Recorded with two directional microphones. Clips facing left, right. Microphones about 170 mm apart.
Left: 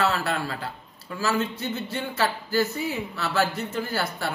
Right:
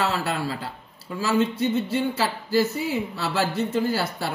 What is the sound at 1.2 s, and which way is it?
A man's voice, 30° right (ahead or behind).